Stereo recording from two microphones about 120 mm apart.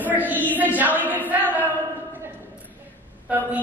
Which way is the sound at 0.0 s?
15° right (ahead or behind).